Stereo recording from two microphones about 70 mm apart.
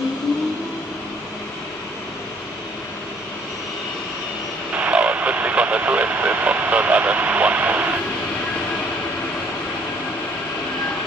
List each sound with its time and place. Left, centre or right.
4.7 s vehicle: centre